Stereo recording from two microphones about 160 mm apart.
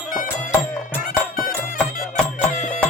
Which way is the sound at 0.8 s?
60° left (ahead or behind).